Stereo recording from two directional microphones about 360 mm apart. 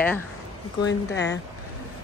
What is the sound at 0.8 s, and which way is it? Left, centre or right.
Speech, left.